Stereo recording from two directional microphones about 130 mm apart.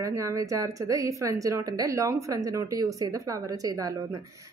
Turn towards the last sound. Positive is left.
turn(degrees=-30)  # may be behind; listen again after turning